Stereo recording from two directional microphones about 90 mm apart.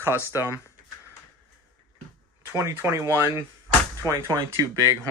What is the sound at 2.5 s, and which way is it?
Speech, 30° right (ahead or behind).